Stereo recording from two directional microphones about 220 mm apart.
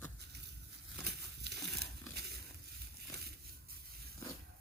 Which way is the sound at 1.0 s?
50° right (ahead or behind).